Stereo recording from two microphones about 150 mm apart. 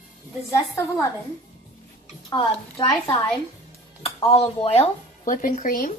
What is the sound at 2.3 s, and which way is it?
Speech, 30° left (ahead or behind).